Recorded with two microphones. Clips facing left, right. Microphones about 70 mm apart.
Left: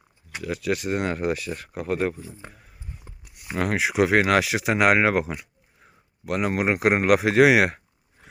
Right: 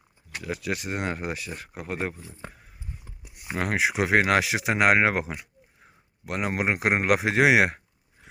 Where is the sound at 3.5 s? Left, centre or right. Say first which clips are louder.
Left 3 dB; right.